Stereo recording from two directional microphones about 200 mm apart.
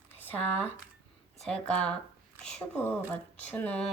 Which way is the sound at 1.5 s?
5° left (ahead or behind).